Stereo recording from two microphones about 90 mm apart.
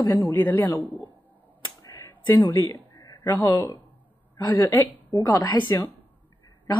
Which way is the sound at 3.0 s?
55° left (ahead or behind).